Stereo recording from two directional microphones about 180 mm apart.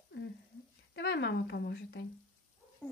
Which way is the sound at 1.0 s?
70° left (ahead or behind).